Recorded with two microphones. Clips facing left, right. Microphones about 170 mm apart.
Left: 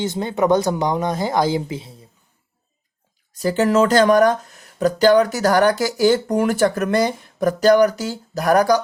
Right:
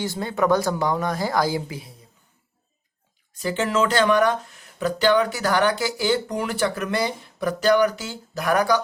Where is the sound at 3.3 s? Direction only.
40° left (ahead or behind).